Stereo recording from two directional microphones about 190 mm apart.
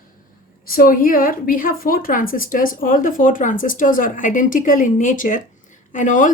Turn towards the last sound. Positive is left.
turn(degrees=45)  # may be behind; listen again after turning